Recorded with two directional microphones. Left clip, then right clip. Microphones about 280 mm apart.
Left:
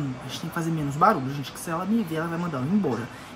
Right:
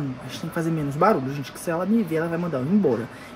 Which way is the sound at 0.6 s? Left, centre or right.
Left.